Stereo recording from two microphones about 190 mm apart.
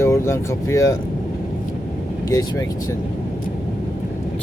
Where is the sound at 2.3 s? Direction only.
20° left (ahead or behind).